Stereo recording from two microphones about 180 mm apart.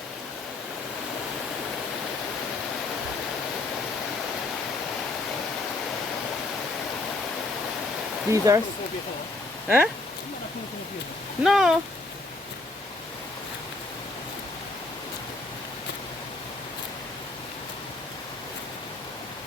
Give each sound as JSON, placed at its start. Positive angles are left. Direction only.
{"t": 8.3, "sound": "speech", "side_deg": -15}
{"t": 9.6, "sound": "speech", "side_deg": -5}
{"t": 11.4, "sound": "speech", "side_deg": 0}